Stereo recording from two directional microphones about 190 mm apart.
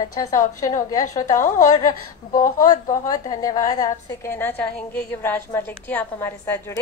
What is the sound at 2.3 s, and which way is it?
Speech, 45° left (ahead or behind).